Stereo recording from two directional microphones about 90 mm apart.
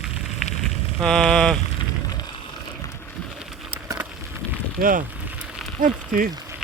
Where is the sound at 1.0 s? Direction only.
5° left (ahead or behind).